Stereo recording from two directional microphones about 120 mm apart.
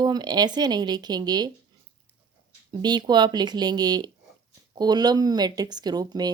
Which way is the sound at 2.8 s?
35° right (ahead or behind).